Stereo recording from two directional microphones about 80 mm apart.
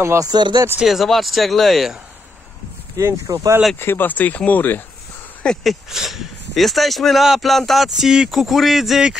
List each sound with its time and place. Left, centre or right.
0.0 s speech: right
0.3 s speech: right
0.7 s speech: centre
3.0 s speech: right
3.8 s speech: left
5.4 s speech: centre